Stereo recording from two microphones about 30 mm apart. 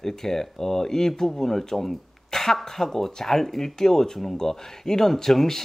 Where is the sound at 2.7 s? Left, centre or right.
Centre.